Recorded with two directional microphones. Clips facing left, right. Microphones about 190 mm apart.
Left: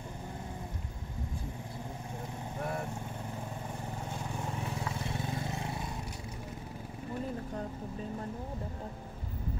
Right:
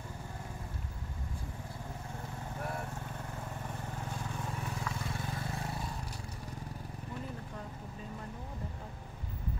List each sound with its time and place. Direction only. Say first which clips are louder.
4.8 s vehicle: left 2 dB; 25° left (ahead or behind)